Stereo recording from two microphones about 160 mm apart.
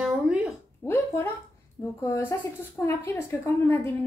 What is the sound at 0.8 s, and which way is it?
A woman's voice, 15° left (ahead or behind).